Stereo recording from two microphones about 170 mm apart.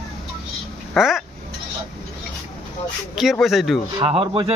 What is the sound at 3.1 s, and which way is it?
Speech, centre (ahead or behind).